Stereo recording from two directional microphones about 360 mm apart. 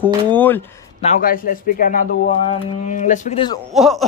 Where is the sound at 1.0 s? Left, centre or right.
Left.